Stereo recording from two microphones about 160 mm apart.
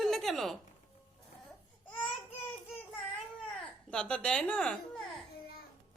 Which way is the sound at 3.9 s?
5° left (ahead or behind).